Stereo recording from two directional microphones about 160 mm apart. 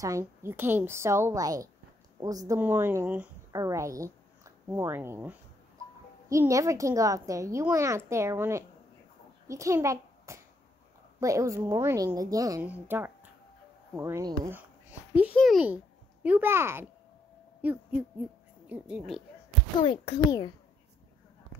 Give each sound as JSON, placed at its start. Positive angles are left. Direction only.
{"t": 0.0, "sound": "a woman's voice", "side_deg": -20}
{"t": 12.6, "sound": "a woman's voice", "side_deg": -10}
{"t": 15.3, "sound": "a child's voice", "side_deg": 0}
{"t": 15.6, "sound": "a child's voice", "side_deg": -10}
{"t": 17.6, "sound": "owl", "side_deg": -10}
{"t": 18.7, "sound": "a woman's voice", "side_deg": -5}
{"t": 19.8, "sound": "a child's voice", "side_deg": 35}